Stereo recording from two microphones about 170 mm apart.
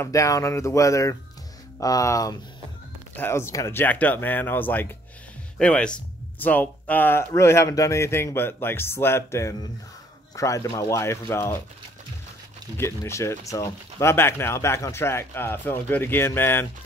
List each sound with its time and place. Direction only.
0.0 s speech: 20° left (ahead or behind)
12.7 s speech: 15° left (ahead or behind)